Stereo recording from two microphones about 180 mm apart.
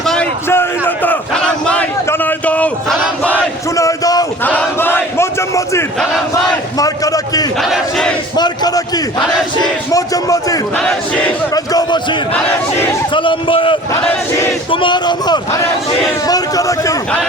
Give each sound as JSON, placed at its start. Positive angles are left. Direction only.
{"t": 0.0, "sound": "a sound", "side_deg": 5}
{"t": 0.4, "sound": "battle cry", "side_deg": 15}
{"t": 1.6, "sound": "a sound", "side_deg": 5}
{"t": 3.2, "sound": "battle cry", "side_deg": 15}
{"t": 7.6, "sound": "crowd", "side_deg": 0}
{"t": 8.4, "sound": "a sound", "side_deg": 20}
{"t": 9.9, "sound": "a man's voice", "side_deg": 20}
{"t": 10.8, "sound": "crowd", "side_deg": 5}
{"t": 11.5, "sound": "speech", "side_deg": 20}
{"t": 13.1, "sound": "a man's voice", "side_deg": 30}